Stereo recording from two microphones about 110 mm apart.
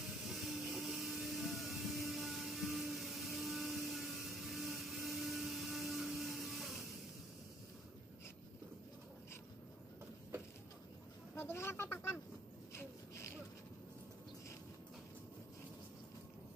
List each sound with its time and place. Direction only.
0.0 s vehicle: centre (ahead or behind)
11.3 s speech: 20° left (ahead or behind)